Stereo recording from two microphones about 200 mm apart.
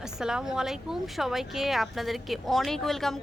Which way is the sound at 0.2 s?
5° right (ahead or behind).